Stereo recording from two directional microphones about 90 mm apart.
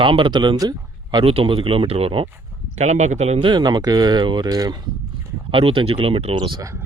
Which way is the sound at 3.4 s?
55° right (ahead or behind).